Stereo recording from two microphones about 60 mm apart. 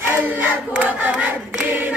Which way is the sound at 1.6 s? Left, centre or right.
Right.